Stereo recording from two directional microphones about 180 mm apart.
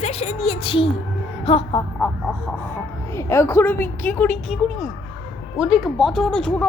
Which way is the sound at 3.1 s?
15° left (ahead or behind).